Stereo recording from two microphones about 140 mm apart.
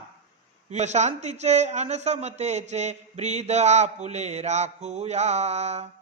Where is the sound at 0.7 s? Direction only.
55° right (ahead or behind).